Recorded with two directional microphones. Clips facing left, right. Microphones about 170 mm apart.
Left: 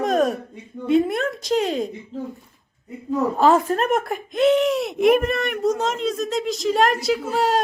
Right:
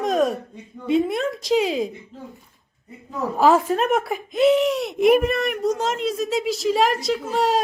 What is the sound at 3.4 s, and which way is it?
Speech, 5° right (ahead or behind).